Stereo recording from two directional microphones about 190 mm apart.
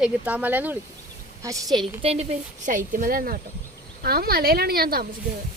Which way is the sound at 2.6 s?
45° right (ahead or behind).